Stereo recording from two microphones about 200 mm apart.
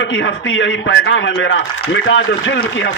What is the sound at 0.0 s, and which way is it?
A man's voice, 65° left (ahead or behind).